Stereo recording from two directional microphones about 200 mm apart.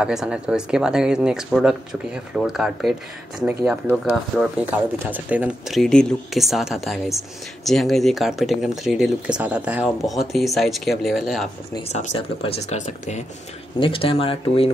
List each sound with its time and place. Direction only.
0.0 s speech: 5° right (ahead or behind)
11.9 s speech: 35° left (ahead or behind)
13.7 s speech: 25° left (ahead or behind)